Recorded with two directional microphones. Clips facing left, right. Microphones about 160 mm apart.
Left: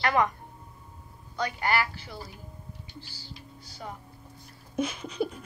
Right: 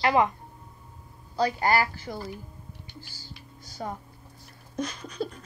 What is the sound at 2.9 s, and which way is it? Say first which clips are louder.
Hum: left 1 dB; 45° right (ahead or behind).